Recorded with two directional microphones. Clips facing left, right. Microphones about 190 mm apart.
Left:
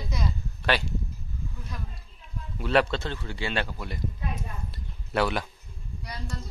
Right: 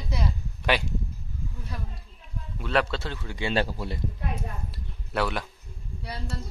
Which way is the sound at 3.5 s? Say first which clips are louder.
Right 4 dB; 35° right (ahead or behind).